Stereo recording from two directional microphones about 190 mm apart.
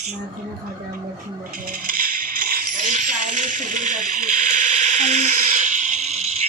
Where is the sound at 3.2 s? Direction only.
40° right (ahead or behind).